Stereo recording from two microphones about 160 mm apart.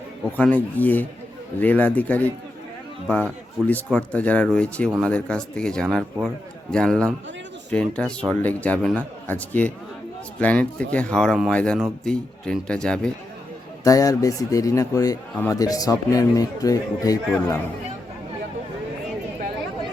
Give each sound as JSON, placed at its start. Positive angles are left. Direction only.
{"t": 0.3, "sound": "a man's voice", "side_deg": 10}
{"t": 13.8, "sound": "a man's voice", "side_deg": 20}